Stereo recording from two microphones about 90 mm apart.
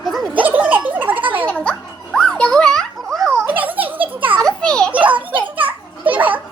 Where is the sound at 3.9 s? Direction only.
20° right (ahead or behind).